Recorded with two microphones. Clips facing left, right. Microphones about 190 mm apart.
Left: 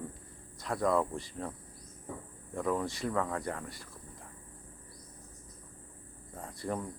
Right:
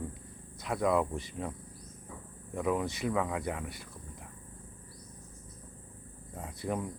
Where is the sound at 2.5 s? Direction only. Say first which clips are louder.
Right 1 dB; 10° right (ahead or behind).